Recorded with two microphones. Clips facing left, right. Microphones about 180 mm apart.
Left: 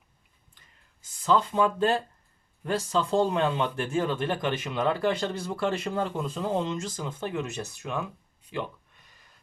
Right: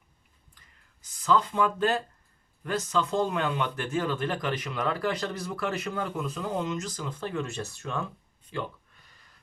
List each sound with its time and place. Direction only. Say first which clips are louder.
1.0 s speech: left 1 dB; 25° left (ahead or behind)